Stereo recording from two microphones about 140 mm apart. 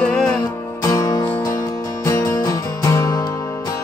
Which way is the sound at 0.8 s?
25° left (ahead or behind).